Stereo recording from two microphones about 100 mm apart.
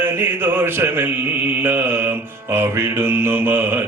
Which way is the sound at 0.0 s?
20° right (ahead or behind).